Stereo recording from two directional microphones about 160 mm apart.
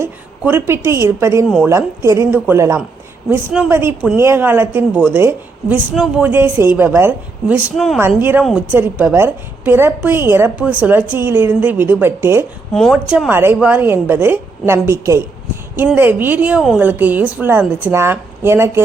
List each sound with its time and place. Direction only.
0.0 s a woman's voice: 15° right (ahead or behind)
1.5 s a woman's voice: 5° right (ahead or behind)
1.7 s a woman's voice: 20° right (ahead or behind)
12.7 s speech: centre (ahead or behind)
13.1 s a woman's voice: 10° right (ahead or behind)